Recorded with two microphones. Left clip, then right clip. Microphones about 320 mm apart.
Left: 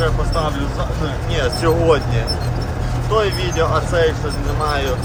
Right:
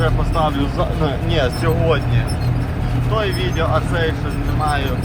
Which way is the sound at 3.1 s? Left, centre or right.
Centre.